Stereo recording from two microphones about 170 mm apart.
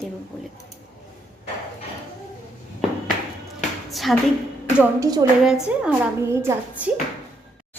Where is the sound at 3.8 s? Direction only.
Centre (ahead or behind).